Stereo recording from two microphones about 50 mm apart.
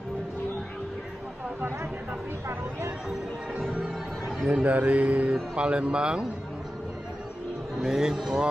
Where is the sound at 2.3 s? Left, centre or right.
Right.